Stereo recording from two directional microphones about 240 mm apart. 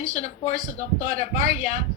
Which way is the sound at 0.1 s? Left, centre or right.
Left.